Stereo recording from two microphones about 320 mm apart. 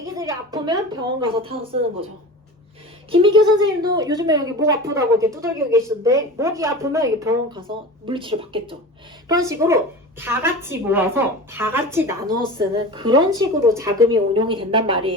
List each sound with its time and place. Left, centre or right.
0.0 s a woman's voice: centre
3.1 s a woman's voice: centre